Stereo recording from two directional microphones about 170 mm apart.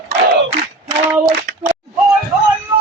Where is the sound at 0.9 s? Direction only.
20° right (ahead or behind).